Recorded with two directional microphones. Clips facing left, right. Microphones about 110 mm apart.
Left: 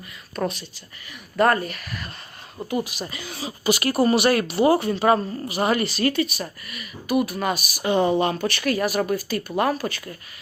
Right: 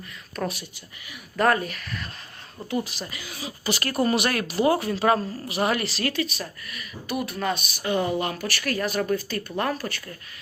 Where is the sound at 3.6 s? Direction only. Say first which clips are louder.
Left 5 dB; 10° left (ahead or behind).